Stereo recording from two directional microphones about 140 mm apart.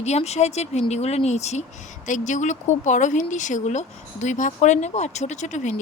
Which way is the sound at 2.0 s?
65° left (ahead or behind).